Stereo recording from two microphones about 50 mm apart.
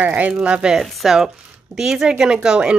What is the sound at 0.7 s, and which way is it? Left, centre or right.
Speech, centre.